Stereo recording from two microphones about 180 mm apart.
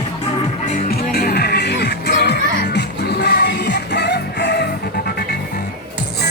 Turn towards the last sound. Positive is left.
turn(degrees=70)  # may be behind; listen again after turning